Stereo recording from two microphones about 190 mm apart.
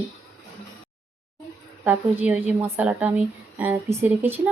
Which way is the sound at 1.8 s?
10° right (ahead or behind).